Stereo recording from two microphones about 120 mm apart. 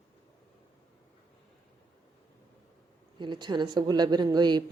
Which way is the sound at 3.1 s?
40° right (ahead or behind).